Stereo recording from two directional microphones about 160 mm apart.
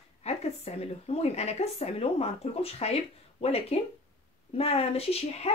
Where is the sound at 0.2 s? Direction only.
40° left (ahead or behind).